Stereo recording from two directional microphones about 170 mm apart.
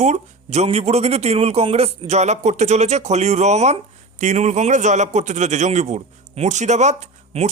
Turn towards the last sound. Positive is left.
turn(degrees=-45)  # may be behind; listen again after turning